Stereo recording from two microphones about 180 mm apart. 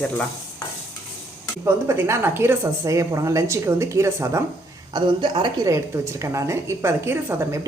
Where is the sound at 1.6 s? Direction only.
15° right (ahead or behind).